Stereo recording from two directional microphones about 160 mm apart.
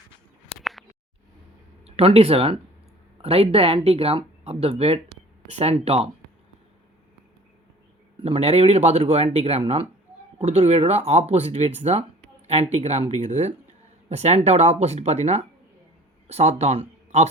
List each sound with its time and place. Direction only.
0.5 s a sound: centre (ahead or behind)
1.8 s speech: 40° right (ahead or behind)
8.2 s speech: 40° right (ahead or behind)